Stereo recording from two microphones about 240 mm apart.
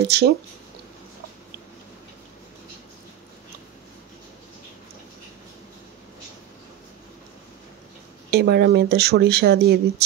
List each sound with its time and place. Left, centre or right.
0.0 s speech: right
8.3 s speech: right